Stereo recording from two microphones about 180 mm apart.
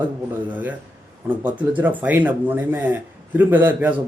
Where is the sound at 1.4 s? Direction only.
10° right (ahead or behind).